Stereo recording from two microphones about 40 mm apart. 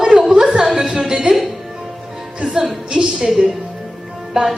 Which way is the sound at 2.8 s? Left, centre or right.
Centre.